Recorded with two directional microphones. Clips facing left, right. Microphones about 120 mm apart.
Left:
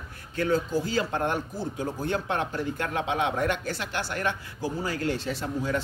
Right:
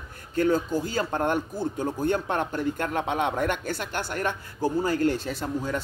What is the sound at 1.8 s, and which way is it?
Speech, 50° right (ahead or behind).